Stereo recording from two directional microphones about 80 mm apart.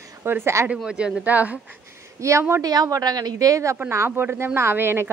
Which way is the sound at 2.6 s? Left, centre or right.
Right.